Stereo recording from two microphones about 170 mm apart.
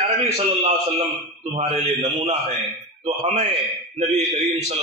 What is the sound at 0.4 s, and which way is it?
Speech, 35° right (ahead or behind).